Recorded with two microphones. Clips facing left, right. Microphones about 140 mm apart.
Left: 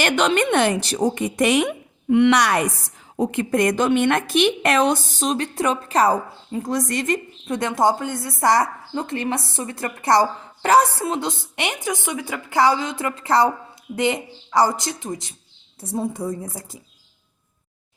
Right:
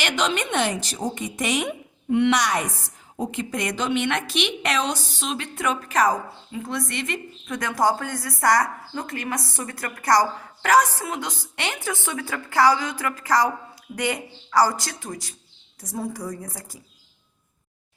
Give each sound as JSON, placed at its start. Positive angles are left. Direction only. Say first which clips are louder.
{"t": 0.0, "sound": "a woman's voice", "louder": "left 6 dB", "side_deg": 55}